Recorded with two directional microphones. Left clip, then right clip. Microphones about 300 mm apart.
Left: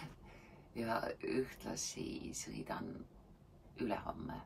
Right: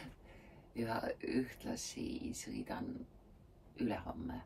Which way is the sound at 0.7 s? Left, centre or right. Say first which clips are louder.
Even; centre.